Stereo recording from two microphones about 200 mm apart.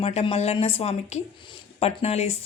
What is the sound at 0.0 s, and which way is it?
A woman's voice, 30° left (ahead or behind).